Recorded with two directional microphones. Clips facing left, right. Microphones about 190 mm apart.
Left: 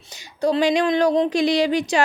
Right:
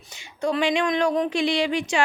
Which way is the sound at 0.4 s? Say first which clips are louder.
Left 4 dB; 35° left (ahead or behind).